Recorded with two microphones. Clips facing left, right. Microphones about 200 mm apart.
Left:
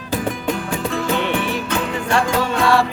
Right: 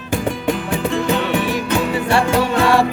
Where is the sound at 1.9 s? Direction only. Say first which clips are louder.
Right 1 dB; 10° right (ahead or behind).